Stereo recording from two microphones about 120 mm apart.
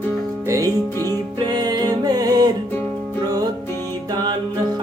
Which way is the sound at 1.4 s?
35° right (ahead or behind).